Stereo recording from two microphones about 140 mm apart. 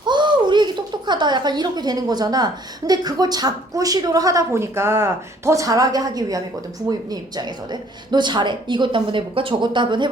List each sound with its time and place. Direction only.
0.0 s a woman's voice: 35° right (ahead or behind)